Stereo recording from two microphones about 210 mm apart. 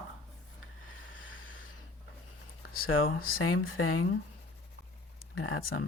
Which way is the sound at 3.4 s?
75° left (ahead or behind).